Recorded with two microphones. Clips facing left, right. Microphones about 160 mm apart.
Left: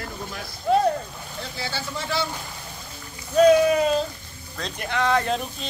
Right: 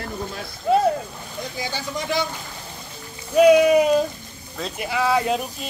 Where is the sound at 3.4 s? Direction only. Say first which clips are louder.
Right 3 dB; 10° right (ahead or behind).